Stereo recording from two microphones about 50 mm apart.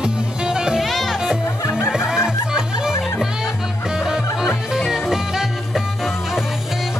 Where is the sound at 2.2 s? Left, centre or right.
Centre.